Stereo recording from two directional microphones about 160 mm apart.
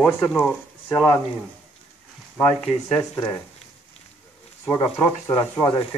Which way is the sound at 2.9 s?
20° left (ahead or behind).